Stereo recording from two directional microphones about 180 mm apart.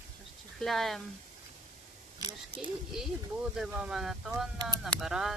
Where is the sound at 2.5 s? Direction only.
5° right (ahead or behind).